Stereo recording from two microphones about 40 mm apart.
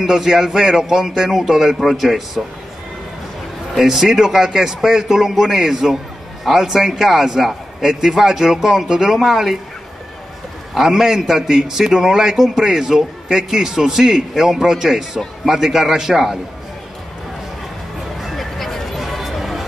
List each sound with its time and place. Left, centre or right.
0.0 s a man's voice: centre
3.7 s a man's voice: centre
10.7 s a man's voice: centre
18.2 s a sound: centre